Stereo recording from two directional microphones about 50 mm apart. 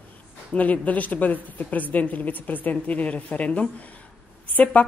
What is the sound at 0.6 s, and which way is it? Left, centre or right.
A woman's voice, left.